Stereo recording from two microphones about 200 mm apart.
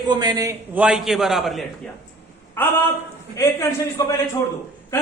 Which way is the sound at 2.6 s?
10° left (ahead or behind).